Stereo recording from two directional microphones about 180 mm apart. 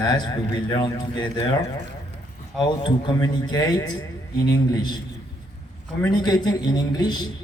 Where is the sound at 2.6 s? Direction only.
25° left (ahead or behind).